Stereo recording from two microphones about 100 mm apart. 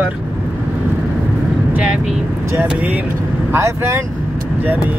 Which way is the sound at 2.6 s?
15° right (ahead or behind).